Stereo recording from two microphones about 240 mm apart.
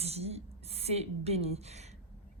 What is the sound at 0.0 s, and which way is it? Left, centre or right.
A woman's voice, right.